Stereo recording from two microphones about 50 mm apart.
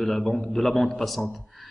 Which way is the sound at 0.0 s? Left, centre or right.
Centre.